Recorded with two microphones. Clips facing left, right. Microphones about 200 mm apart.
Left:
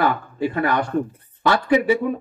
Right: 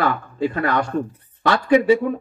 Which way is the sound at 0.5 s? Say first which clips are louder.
Left 2 dB; 20° left (ahead or behind).